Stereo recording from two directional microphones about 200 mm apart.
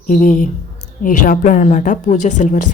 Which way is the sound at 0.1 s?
40° left (ahead or behind).